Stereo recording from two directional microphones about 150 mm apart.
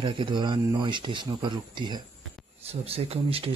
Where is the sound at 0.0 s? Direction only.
35° right (ahead or behind).